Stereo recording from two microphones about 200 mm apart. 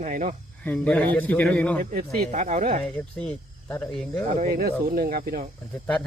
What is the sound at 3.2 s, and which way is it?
Speech, 5° left (ahead or behind).